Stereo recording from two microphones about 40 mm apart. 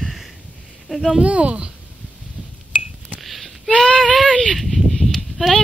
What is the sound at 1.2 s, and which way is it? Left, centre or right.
Speech, right.